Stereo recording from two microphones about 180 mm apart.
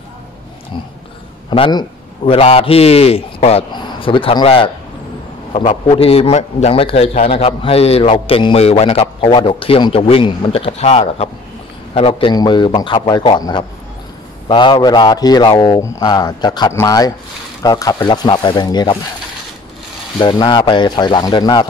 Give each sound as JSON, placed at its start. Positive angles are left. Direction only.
{"t": 1.5, "sound": "a man's voice", "side_deg": 25}
{"t": 20.2, "sound": "a man's voice", "side_deg": 25}